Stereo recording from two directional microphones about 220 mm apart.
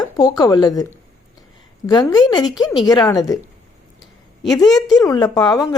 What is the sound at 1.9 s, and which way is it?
A woman's voice, 20° left (ahead or behind).